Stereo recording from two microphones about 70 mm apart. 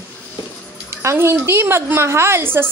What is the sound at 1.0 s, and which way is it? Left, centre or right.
A woman's voice, right.